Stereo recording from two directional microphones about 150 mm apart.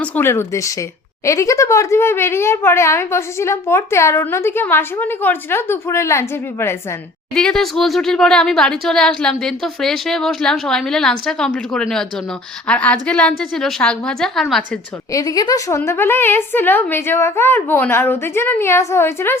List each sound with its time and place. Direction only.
0.0 s a woman's voice: 15° left (ahead or behind)
7.3 s speech: 5° left (ahead or behind)
15.1 s a woman's voice: 25° left (ahead or behind)